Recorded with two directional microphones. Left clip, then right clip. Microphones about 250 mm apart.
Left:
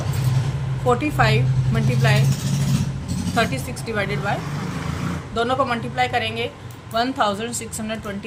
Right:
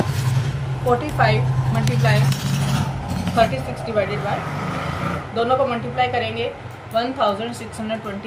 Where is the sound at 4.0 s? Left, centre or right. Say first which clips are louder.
Right 4 dB; left.